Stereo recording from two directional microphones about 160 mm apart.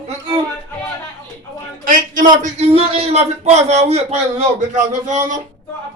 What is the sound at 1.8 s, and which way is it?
Speech, 55° right (ahead or behind).